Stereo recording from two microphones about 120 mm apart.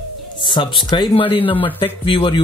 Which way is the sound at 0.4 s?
40° left (ahead or behind).